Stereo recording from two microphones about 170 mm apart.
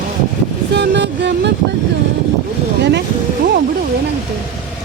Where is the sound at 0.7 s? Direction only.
85° right.